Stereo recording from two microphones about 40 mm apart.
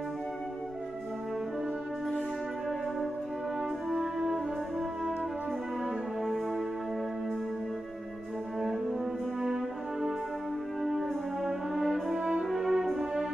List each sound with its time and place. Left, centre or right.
3.9 s brass instrument: centre
6.2 s music: centre
8.5 s music: centre
10.8 s brass instrument: centre
12.1 s french horn: right
12.4 s brass instrument: centre